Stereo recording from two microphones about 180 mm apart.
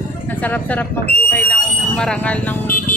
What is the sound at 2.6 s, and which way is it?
Vehicle, 50° left (ahead or behind).